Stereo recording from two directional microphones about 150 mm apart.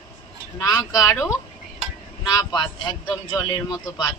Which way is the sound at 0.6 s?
20° left (ahead or behind).